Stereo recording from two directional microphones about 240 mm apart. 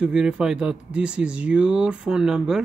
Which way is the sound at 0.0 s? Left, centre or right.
Centre.